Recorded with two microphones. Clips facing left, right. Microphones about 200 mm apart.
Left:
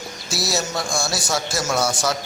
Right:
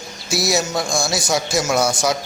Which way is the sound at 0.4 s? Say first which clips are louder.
Right 4 dB; 15° right (ahead or behind).